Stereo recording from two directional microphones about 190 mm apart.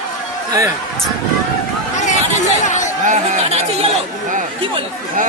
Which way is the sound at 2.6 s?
40° left (ahead or behind).